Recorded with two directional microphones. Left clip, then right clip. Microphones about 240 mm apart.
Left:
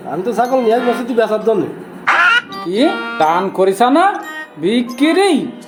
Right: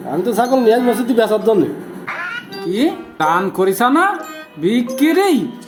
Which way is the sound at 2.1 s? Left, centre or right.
Left.